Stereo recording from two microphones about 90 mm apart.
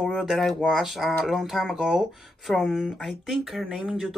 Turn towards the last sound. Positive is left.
turn(degrees=-5)  # may be behind; listen again after turning